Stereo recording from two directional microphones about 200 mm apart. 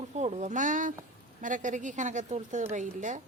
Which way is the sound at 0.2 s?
35° right (ahead or behind).